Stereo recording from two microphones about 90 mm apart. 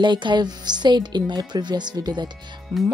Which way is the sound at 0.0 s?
60° right (ahead or behind).